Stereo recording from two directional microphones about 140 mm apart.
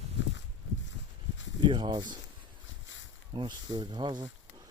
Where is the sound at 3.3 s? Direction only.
35° right (ahead or behind).